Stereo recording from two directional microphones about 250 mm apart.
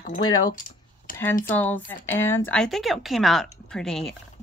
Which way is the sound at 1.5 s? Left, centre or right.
Centre.